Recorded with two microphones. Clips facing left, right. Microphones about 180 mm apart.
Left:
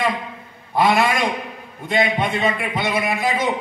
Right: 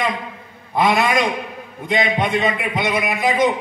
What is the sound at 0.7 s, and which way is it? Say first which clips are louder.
A man's voice: even; 20° right (ahead or behind).